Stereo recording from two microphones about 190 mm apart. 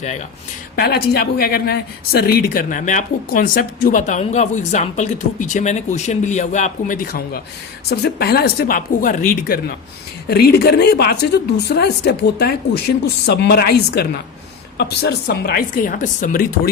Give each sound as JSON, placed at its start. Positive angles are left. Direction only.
{"t": 0.8, "sound": "speech", "side_deg": 55}
{"t": 10.2, "sound": "speech", "side_deg": 60}